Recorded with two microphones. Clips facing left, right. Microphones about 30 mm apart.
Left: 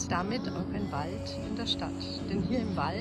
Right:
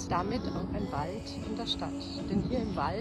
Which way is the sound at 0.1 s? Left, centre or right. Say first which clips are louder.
Right 1 dB; left.